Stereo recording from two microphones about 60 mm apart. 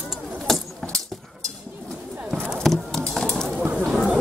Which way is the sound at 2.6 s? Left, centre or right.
Centre.